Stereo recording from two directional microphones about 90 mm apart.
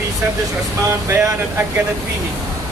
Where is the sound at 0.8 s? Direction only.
35° right (ahead or behind).